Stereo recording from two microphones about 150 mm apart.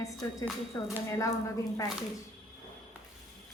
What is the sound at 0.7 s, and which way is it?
Speech, 20° left (ahead or behind).